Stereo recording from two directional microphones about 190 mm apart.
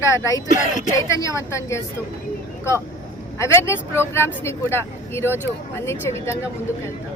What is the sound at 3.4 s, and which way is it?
Speech, 15° left (ahead or behind).